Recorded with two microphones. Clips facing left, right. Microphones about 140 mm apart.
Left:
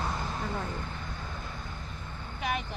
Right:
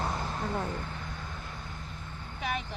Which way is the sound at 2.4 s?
5° left (ahead or behind).